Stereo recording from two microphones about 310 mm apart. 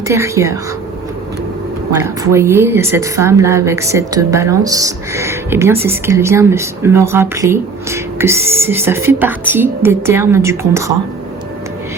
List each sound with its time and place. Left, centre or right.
0.1 s a woman's voice: centre
2.0 s a woman's voice: centre